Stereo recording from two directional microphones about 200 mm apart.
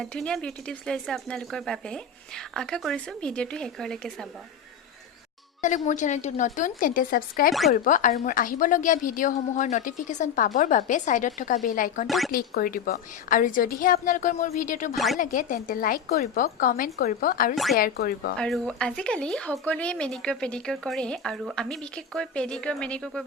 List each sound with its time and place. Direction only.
0.0 s speech: 5° left (ahead or behind)
5.6 s a woman's voice: 40° left (ahead or behind)
12.0 s speech: centre (ahead or behind)
12.3 s a woman's voice: 45° left (ahead or behind)
14.9 s speech: centre (ahead or behind)
15.2 s a woman's voice: 40° left (ahead or behind)
17.5 s speech: centre (ahead or behind)
17.7 s a woman's voice: 45° left (ahead or behind)
18.3 s speech: centre (ahead or behind)